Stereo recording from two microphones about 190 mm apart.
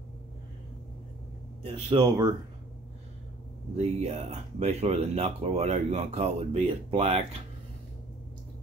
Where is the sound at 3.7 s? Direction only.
35° right (ahead or behind).